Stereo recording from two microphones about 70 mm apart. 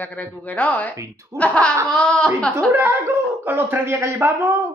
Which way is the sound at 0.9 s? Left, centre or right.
Right.